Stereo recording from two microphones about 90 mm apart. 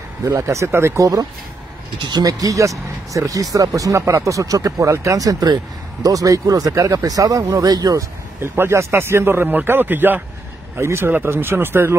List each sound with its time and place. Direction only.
0.2 s speech: 35° right (ahead or behind)
2.0 s speech: 50° right (ahead or behind)
8.4 s speech: 30° right (ahead or behind)